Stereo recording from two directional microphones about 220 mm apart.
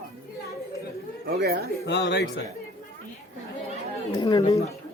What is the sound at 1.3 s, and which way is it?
Speech, 45° right (ahead or behind).